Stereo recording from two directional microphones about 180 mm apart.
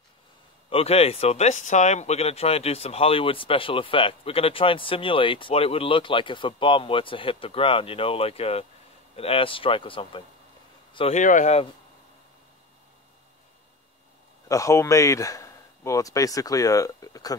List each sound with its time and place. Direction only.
0.7 s speech: 35° left (ahead or behind)
11.1 s speech: 45° left (ahead or behind)
14.5 s speech: 15° left (ahead or behind)